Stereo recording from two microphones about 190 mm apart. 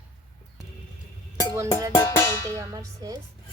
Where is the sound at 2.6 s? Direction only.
20° right (ahead or behind).